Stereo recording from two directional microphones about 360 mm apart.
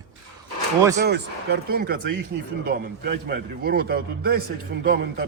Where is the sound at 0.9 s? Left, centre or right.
Right.